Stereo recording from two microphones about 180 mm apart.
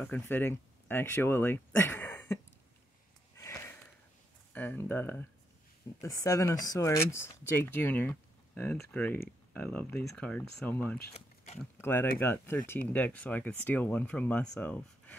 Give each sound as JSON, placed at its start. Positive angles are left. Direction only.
{"t": 0.0, "sound": "speech", "side_deg": 10}
{"t": 3.3, "sound": "sniff", "side_deg": 15}
{"t": 4.6, "sound": "speech", "side_deg": 10}
{"t": 11.1, "sound": "a sound", "side_deg": 35}
{"t": 11.8, "sound": "speech", "side_deg": 10}